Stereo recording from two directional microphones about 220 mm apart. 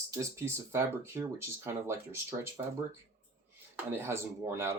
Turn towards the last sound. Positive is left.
turn(degrees=-10)  # may be behind; listen again after turning